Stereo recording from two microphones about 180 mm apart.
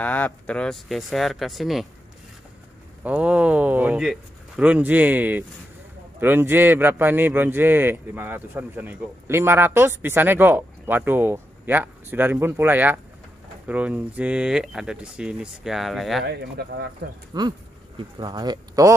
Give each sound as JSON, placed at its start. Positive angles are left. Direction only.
{"t": 0.0, "sound": "speech", "side_deg": 10}
{"t": 3.0, "sound": "speech", "side_deg": -10}
{"t": 16.3, "sound": "speech", "side_deg": -65}
{"t": 17.3, "sound": "speech", "side_deg": -25}